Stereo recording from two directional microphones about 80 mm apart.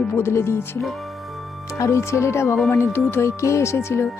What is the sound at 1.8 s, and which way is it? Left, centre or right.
Speech, left.